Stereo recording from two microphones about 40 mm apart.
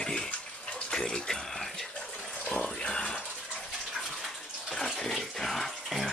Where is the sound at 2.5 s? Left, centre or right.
Centre.